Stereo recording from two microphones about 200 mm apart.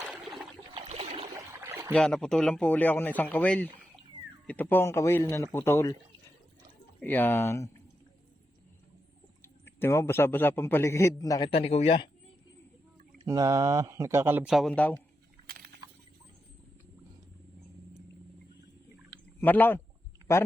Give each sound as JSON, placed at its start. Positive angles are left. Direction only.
{"t": 0.1, "sound": "a sound", "side_deg": 0}
{"t": 1.6, "sound": "rowboat", "side_deg": -15}
{"t": 1.9, "sound": "a man's voice", "side_deg": 5}
{"t": 7.0, "sound": "a man's voice", "side_deg": 10}
{"t": 9.4, "sound": "a man's voice", "side_deg": 10}
{"t": 13.2, "sound": "speech", "side_deg": -15}
{"t": 15.4, "sound": "a sound", "side_deg": -50}
{"t": 19.4, "sound": "a man's voice", "side_deg": 10}